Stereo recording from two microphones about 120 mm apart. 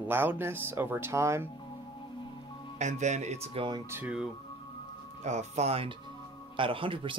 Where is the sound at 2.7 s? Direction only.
80° right.